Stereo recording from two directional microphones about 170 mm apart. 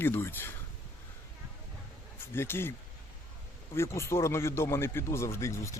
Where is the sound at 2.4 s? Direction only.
15° left (ahead or behind).